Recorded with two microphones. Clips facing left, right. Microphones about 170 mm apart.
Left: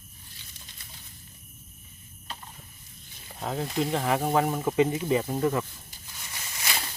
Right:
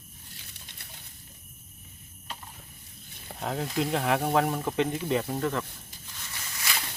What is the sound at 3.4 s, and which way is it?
Speech, centre (ahead or behind).